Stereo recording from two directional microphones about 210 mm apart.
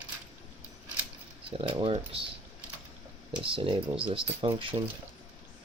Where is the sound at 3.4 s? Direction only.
25° right (ahead or behind).